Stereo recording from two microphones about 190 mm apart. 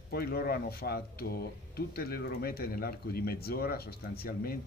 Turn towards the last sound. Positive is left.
turn(degrees=55)  # may be behind; listen again after turning